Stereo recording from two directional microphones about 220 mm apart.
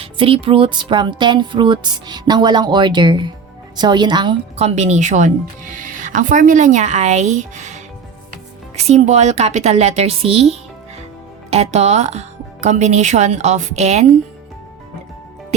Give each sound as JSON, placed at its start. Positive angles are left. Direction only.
{"t": 0.0, "sound": "speech", "side_deg": -25}